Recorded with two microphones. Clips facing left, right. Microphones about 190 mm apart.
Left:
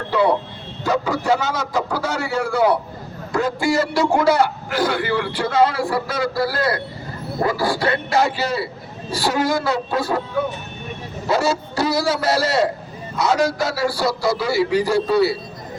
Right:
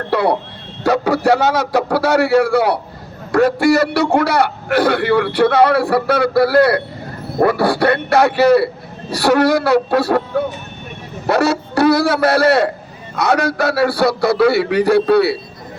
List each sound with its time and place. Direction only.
0.1 s a man's voice: 70° right (ahead or behind)
11.3 s a man's voice: 65° right (ahead or behind)